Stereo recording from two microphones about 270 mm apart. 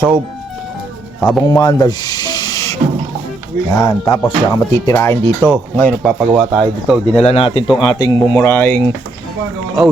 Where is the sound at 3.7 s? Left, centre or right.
Centre.